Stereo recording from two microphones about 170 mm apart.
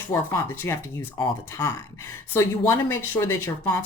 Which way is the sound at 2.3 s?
15° left (ahead or behind).